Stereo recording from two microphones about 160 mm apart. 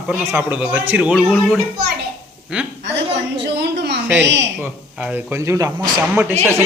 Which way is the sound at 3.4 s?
90° right.